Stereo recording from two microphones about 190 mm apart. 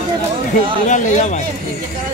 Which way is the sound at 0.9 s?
40° left (ahead or behind).